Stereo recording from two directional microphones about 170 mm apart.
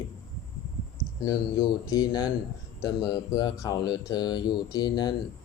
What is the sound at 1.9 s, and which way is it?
Speech, 20° left (ahead or behind).